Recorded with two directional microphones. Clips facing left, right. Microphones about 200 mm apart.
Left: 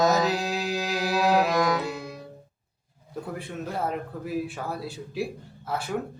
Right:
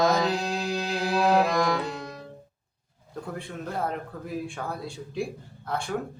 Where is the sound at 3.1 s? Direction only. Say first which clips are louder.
Left 1 dB; 5° left (ahead or behind).